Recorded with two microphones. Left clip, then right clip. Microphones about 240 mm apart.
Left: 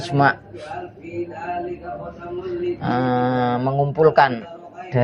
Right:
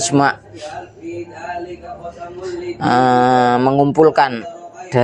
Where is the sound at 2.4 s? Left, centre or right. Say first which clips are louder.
Right 6 dB; right.